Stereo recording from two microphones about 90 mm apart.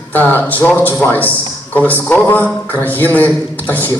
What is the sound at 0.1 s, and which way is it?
Speech, 20° left (ahead or behind).